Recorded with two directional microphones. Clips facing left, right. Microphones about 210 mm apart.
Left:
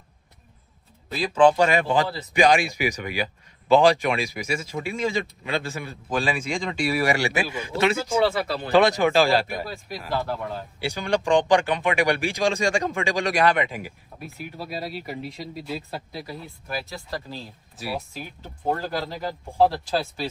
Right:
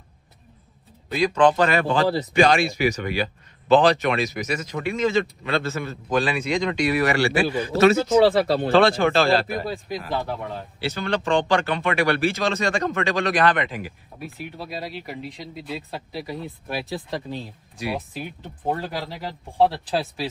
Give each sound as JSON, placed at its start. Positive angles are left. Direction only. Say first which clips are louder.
{"t": 1.0, "sound": "speech", "louder": "even", "side_deg": 0}
{"t": 8.3, "sound": "speech", "louder": "right 7 dB", "side_deg": -30}
{"t": 8.7, "sound": "speech", "louder": "left 1 dB", "side_deg": 15}
{"t": 9.5, "sound": "speech", "louder": "right 4 dB", "side_deg": 0}
{"t": 10.8, "sound": "speech", "louder": "left 1 dB", "side_deg": 15}